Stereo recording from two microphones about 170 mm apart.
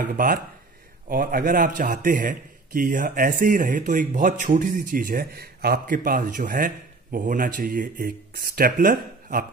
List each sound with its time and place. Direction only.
0.0 s a man's voice: 55° right (ahead or behind)